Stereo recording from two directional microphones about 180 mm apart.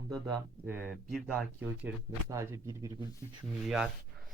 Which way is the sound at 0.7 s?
10° right (ahead or behind).